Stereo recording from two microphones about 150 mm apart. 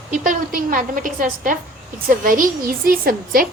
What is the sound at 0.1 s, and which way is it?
A woman's voice, 65° right (ahead or behind).